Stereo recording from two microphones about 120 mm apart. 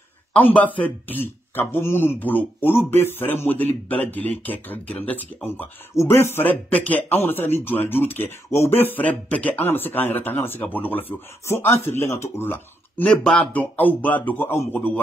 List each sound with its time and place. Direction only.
0.3 s speech: 10° left (ahead or behind)